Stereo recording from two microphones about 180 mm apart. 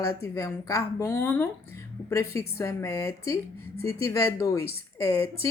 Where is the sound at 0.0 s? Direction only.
15° left (ahead or behind).